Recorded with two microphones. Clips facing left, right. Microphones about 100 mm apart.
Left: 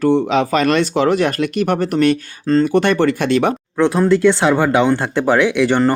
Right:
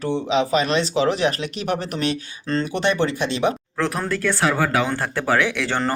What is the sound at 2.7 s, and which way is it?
Speech, 55° left (ahead or behind).